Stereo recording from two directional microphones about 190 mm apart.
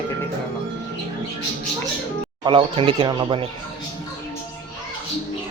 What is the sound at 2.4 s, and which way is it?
Speech, 30° right (ahead or behind).